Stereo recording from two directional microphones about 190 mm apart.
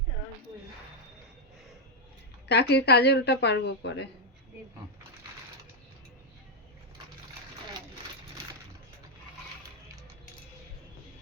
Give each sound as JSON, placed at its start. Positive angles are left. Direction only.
{"t": 2.5, "sound": "speech", "side_deg": 60}